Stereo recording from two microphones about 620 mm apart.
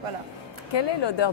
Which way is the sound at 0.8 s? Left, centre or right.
Left.